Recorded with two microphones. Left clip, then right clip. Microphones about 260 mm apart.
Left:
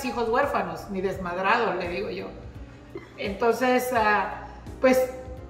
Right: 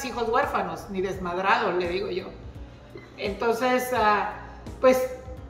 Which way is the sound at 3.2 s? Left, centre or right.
Centre.